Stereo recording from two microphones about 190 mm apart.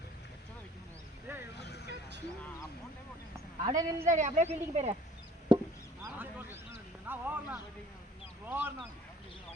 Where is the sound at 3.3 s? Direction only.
15° right (ahead or behind).